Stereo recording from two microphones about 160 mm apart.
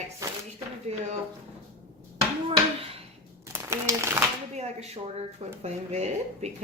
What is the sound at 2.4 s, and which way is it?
Speech, 35° right (ahead or behind).